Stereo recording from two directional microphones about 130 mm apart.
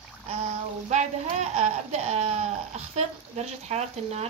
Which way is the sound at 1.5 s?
60° right (ahead or behind).